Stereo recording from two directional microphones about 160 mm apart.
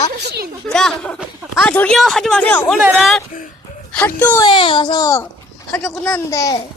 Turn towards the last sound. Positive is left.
turn(degrees=20)  # may be behind; listen again after turning